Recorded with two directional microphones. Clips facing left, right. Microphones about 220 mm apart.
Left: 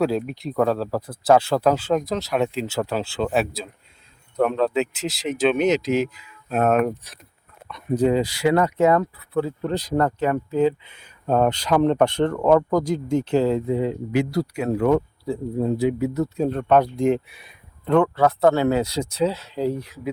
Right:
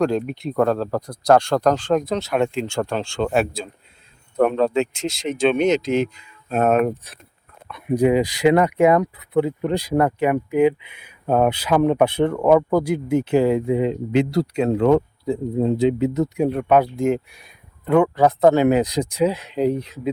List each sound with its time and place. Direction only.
0.0 s speech: 5° left (ahead or behind)
7.7 s speech: 10° right (ahead or behind)